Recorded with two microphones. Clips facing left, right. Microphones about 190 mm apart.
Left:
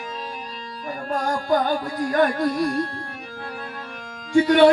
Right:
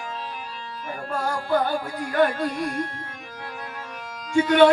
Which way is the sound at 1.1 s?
40° left (ahead or behind).